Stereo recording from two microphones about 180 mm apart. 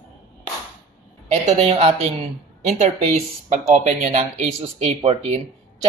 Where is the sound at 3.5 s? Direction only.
40° right (ahead or behind).